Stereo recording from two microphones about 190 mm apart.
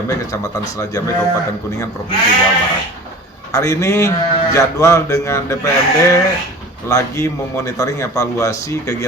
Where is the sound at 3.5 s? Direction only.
15° left (ahead or behind).